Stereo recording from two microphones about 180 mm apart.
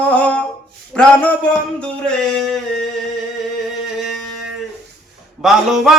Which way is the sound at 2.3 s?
Centre (ahead or behind).